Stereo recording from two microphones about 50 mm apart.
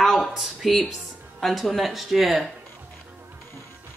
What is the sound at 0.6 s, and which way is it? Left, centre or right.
Speech, centre.